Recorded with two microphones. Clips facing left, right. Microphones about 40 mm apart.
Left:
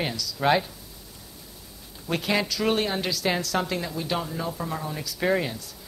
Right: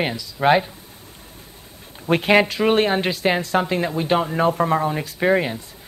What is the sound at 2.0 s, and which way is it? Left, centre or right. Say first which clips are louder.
Speech: right 9 dB; right.